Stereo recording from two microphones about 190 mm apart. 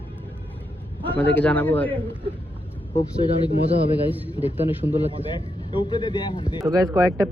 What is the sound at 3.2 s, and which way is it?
Speech, 25° left (ahead or behind).